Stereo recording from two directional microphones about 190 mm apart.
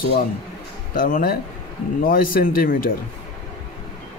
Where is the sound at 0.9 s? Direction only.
50° left (ahead or behind).